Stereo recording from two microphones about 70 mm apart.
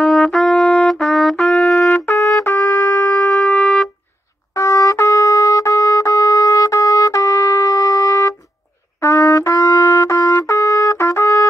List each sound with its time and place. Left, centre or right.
0.0 s trumpet: centre
1.3 s trumpet: centre
2.5 s music: left
3.3 s music: centre
4.6 s trumpet: left